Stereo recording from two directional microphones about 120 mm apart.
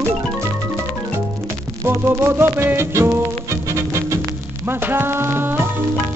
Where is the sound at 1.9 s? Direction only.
20° right (ahead or behind).